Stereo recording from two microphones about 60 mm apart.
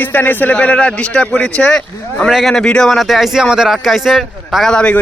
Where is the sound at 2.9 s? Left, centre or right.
Centre.